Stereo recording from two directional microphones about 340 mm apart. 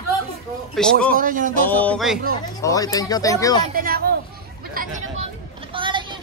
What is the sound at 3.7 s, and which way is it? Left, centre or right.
Speech, right.